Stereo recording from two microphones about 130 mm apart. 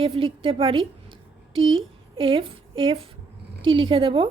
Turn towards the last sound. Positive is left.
turn(degrees=-45)  # may be behind; listen again after turning